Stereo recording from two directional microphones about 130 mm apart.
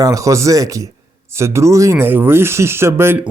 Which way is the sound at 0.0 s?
25° right (ahead or behind).